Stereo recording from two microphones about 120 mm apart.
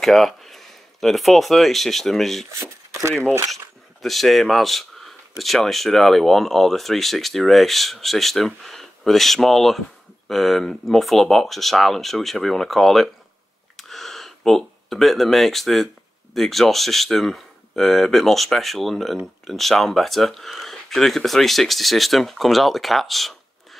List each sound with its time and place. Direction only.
0.0 s a sound: centre (ahead or behind)
1.0 s speech: centre (ahead or behind)
2.9 s speech: 25° right (ahead or behind)
4.0 s speech: centre (ahead or behind)
13.7 s a sound: centre (ahead or behind)
16.3 s speech: centre (ahead or behind)